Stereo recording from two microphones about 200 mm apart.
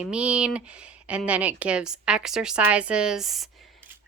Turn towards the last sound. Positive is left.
turn(degrees=0)  # may be behind; listen again after turning